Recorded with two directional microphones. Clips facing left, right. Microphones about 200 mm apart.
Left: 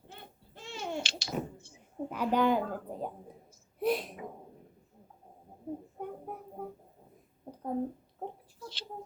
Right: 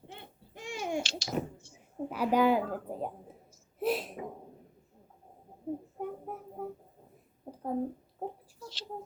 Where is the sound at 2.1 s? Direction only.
10° right (ahead or behind).